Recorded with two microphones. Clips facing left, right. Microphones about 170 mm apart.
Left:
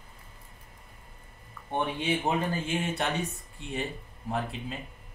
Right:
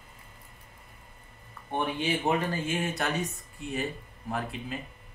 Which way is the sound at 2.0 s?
25° left (ahead or behind).